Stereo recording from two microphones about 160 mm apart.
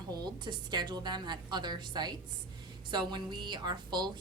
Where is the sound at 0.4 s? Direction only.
30° right (ahead or behind).